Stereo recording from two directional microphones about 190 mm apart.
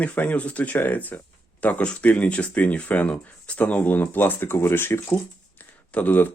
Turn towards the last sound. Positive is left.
turn(degrees=10)  # may be behind; listen again after turning